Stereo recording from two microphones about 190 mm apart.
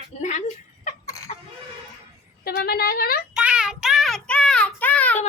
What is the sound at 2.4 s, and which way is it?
Speech, 55° left (ahead or behind).